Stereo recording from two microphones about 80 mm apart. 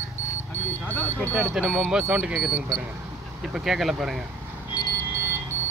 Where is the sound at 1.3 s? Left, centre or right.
Right.